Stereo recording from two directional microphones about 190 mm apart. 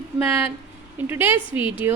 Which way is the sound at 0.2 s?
10° right (ahead or behind).